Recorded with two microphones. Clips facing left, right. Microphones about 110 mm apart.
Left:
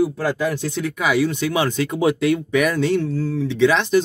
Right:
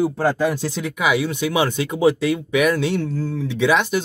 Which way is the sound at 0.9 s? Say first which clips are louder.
Left 1 dB; 5° right (ahead or behind).